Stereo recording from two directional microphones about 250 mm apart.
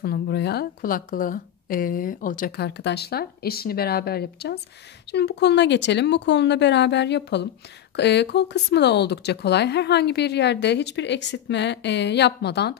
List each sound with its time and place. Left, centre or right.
0.0 s a woman's voice: left